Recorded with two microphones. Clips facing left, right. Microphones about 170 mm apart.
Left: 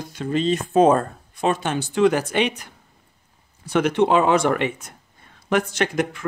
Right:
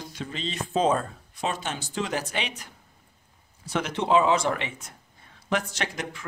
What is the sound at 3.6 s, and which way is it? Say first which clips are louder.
Speech: left 8 dB; 60° left (ahead or behind).